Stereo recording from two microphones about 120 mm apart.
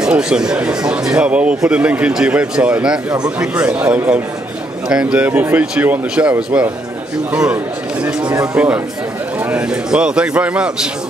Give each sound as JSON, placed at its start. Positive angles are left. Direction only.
{"t": 0.0, "sound": "speech", "side_deg": -5}
{"t": 8.0, "sound": "speech", "side_deg": -10}